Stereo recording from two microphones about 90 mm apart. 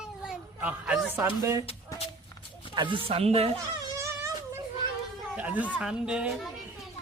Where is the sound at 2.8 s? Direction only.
70° right (ahead or behind); by 3.4 s 90° right.